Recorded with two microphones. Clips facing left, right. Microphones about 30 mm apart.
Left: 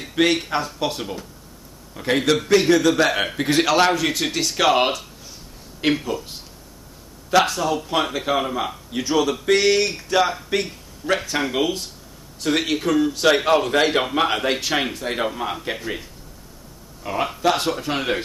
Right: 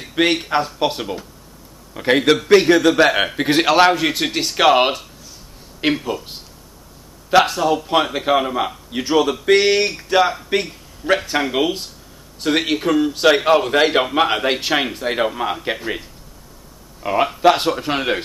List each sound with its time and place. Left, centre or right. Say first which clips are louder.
0.0 s a man's voice: right 1 dB; centre
7.2 s a man's voice: right 4 dB; centre
10.5 s a sound: right 3 dB; centre
11.3 s a man's voice: right 3 dB; centre